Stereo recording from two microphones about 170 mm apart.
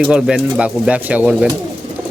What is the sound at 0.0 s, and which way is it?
Speech, 5° right (ahead or behind).